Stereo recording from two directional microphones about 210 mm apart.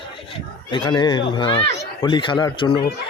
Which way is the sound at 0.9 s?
20° left (ahead or behind).